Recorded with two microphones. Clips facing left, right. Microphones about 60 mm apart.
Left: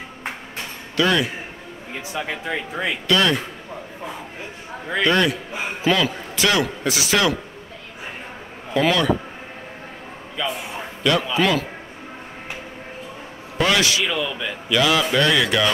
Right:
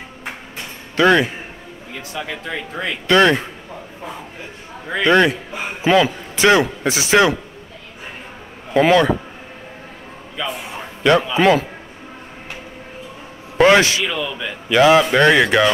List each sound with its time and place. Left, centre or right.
0.9 s a man's voice: right
2.0 s speech: centre
3.1 s a man's voice: right
5.0 s a man's voice: right
8.7 s a man's voice: right
10.4 s a man's voice: centre
11.3 s a man's voice: right
13.6 s a man's voice: right
14.0 s a man's voice: centre
14.7 s a man's voice: right